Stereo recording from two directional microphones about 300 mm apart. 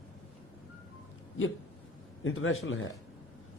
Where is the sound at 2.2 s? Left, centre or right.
Left.